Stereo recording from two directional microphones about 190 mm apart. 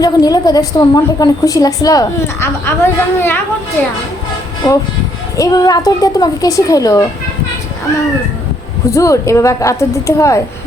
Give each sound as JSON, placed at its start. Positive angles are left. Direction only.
{"t": 0.0, "sound": "a woman's voice", "side_deg": 20}
{"t": 4.6, "sound": "a woman's voice", "side_deg": 25}
{"t": 8.9, "sound": "a woman's voice", "side_deg": 15}